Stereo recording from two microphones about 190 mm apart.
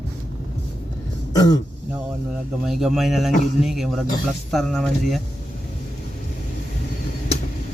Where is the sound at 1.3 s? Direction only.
20° left (ahead or behind).